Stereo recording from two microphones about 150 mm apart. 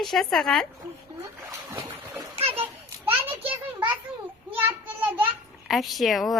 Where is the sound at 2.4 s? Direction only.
40° right (ahead or behind).